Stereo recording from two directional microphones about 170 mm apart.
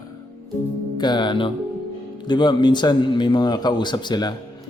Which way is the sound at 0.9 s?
25° left (ahead or behind).